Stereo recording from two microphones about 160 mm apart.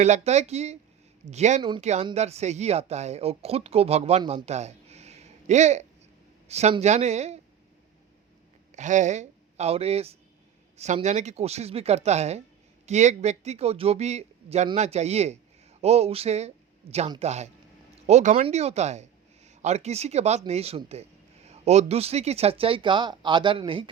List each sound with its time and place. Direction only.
0.0 s a man's voice: 45° right (ahead or behind)
4.4 s a sound: 45° right (ahead or behind)
6.5 s speech: 40° right (ahead or behind)
8.7 s a man's voice: 50° right (ahead or behind); by 23.9 s 35° right (ahead or behind)